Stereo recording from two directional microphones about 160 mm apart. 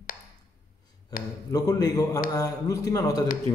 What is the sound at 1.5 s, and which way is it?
Speech, 25° left (ahead or behind).